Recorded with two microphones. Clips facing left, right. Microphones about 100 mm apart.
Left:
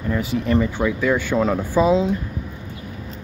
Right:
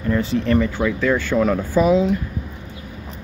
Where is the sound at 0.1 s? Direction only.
10° left (ahead or behind); by 2.1 s 25° left (ahead or behind).